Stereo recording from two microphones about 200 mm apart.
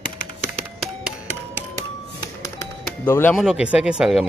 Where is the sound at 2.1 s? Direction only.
15° left (ahead or behind).